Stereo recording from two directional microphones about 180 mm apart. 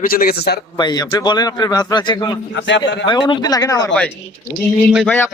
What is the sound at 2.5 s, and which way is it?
Speech, 85° left.